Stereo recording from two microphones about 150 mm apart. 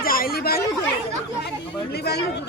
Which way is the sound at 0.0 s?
75° left (ahead or behind).